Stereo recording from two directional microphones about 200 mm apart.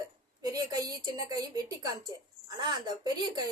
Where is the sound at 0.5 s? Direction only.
20° right (ahead or behind).